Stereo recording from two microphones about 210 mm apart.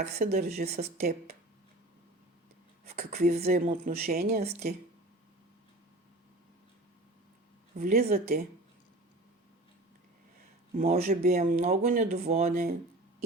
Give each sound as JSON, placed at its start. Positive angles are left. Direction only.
{"t": 0.0, "sound": "speech", "side_deg": -45}
{"t": 3.0, "sound": "speech", "side_deg": -45}
{"t": 7.8, "sound": "speech", "side_deg": -40}
{"t": 10.8, "sound": "speech", "side_deg": -40}
{"t": 11.3, "sound": "speech", "side_deg": -30}
{"t": 12.2, "sound": "speech", "side_deg": -30}